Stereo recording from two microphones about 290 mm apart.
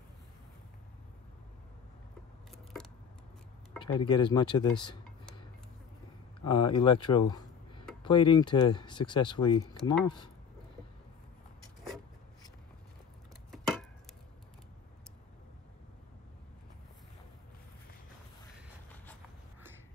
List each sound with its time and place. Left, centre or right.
2.5 s keys jangling: centre
3.8 s speech: centre
6.4 s speech: centre